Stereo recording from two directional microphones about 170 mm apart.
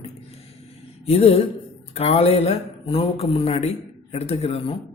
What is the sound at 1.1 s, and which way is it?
Speech, 35° left (ahead or behind).